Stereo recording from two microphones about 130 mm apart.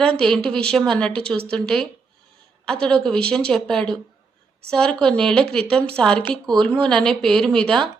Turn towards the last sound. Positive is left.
turn(degrees=5)  # may be behind; listen again after turning